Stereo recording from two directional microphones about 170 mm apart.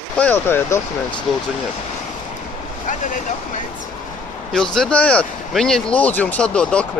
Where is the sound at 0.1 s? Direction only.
10° left (ahead or behind).